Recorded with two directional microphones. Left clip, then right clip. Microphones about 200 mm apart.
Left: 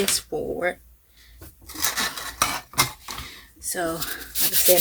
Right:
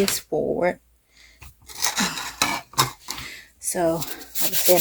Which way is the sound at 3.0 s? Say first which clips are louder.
Right 2 dB; 40° right (ahead or behind).